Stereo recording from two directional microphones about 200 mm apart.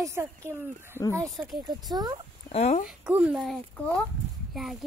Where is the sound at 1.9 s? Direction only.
20° right (ahead or behind).